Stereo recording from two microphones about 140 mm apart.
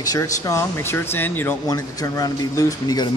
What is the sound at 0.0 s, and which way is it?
Speech, 25° left (ahead or behind).